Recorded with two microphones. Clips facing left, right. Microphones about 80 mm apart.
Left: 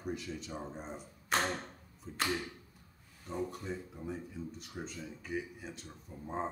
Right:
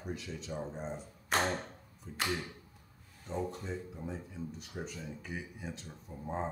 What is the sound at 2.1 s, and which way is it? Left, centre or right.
Speech, centre.